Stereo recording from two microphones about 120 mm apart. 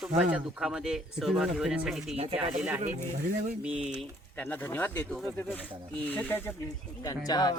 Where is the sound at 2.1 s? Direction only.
60° right (ahead or behind).